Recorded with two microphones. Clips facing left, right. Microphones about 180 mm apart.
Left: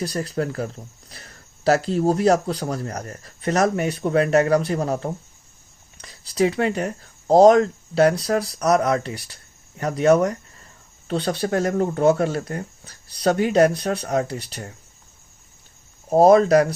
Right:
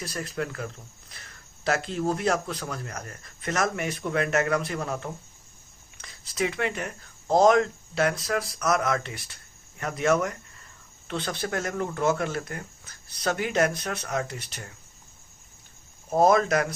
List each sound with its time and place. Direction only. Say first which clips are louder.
0.0 s speech: left 7 dB; 35° left (ahead or behind)
16.0 s speech: left 7 dB; 35° left (ahead or behind)